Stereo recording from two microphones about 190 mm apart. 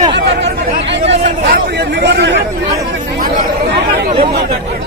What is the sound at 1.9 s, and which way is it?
Speech, 65° right (ahead or behind).